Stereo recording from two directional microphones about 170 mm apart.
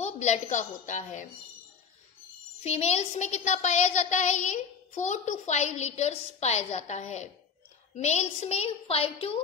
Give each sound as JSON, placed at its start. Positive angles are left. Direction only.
{"t": 0.0, "sound": "a woman's voice", "side_deg": 40}
{"t": 2.6, "sound": "child singing", "side_deg": 40}
{"t": 7.9, "sound": "a woman's voice", "side_deg": 40}